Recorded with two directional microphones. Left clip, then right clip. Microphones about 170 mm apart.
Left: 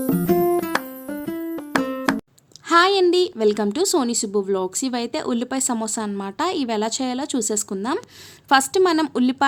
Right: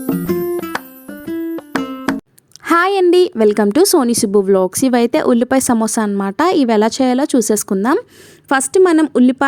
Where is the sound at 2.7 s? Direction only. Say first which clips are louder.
Right 3 dB; 50° right (ahead or behind).